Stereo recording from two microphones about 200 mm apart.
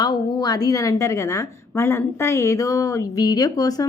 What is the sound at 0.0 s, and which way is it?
A woman's voice, 20° left (ahead or behind).